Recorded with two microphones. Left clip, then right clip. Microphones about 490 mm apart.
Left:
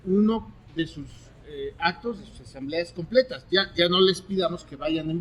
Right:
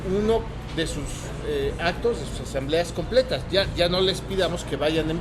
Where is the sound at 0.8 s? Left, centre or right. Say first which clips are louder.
Right 3 dB; left.